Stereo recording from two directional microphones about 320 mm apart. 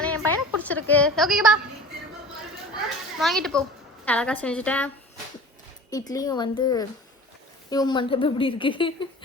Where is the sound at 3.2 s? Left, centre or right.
Centre.